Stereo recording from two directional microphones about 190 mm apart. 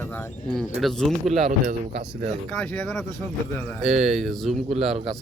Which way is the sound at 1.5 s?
45° right (ahead or behind).